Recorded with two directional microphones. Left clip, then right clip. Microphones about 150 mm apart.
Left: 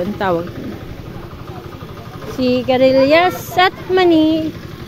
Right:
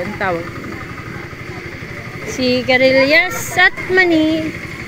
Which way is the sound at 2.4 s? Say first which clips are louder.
Even; centre (ahead or behind).